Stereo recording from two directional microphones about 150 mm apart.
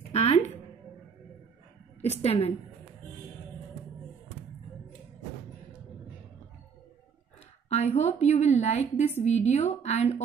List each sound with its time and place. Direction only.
0.1 s music: 45° left (ahead or behind)
2.0 s a woman's voice: 45° left (ahead or behind)
7.7 s a woman's voice: 45° left (ahead or behind)